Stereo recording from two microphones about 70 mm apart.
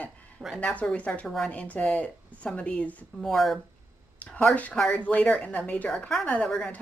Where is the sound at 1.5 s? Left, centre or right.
Left.